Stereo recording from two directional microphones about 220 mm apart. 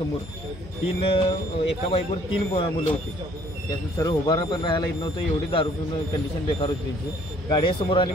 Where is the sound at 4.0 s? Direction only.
15° left (ahead or behind).